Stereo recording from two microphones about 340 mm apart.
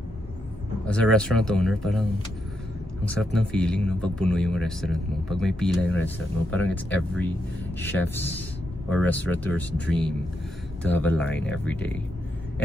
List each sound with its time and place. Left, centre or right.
0.8 s speech: centre
3.1 s speech: centre